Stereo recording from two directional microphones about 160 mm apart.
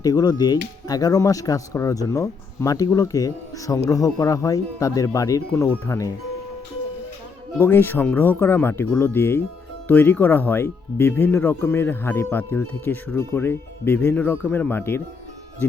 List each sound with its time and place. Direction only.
0.0 s speech: 25° left (ahead or behind)
7.6 s speech: 15° left (ahead or behind)